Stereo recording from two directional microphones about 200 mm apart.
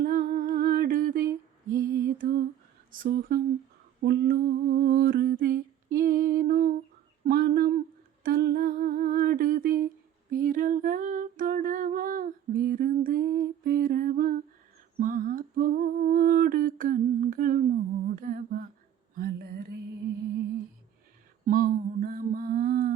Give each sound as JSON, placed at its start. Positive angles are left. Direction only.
{"t": 0.0, "sound": "humming", "side_deg": -45}
{"t": 2.0, "sound": "lullaby", "side_deg": -45}
{"t": 2.9, "sound": "speech", "side_deg": -45}
{"t": 4.0, "sound": "humming", "side_deg": -50}
{"t": 7.3, "sound": "a sound", "side_deg": -45}
{"t": 8.2, "sound": "humming", "side_deg": -50}
{"t": 10.3, "sound": "a sound", "side_deg": -45}
{"t": 21.4, "sound": "mantra", "side_deg": -45}